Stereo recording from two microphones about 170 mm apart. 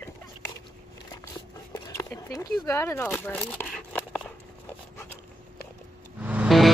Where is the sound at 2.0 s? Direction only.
20° left (ahead or behind).